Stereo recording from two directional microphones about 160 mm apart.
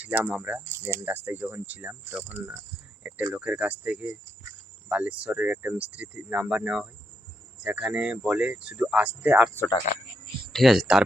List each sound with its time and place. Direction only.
0.0 s speech: 10° right (ahead or behind)
9.9 s speech: 50° left (ahead or behind)
10.5 s speech: centre (ahead or behind)